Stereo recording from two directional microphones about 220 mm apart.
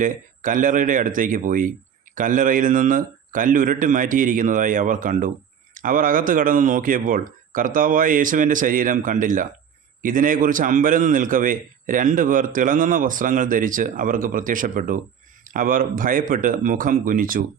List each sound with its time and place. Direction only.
0.0 s a man's voice: 35° right (ahead or behind)